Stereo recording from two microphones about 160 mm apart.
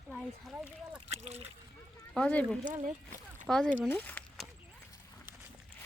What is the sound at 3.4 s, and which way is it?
Speech, 5° left (ahead or behind).